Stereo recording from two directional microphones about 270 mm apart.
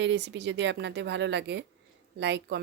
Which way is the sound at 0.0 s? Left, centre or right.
Right.